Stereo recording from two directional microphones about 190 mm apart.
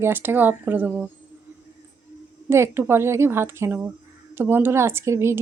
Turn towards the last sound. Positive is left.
turn(degrees=-15)  # may be behind; listen again after turning